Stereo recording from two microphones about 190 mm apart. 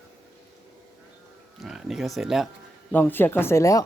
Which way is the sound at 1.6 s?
Centre (ahead or behind).